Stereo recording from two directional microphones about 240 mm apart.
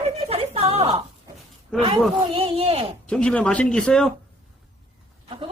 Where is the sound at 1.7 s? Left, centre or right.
Centre.